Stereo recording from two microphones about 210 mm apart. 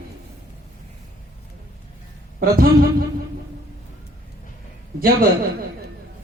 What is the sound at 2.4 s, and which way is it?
Speech, 45° right (ahead or behind).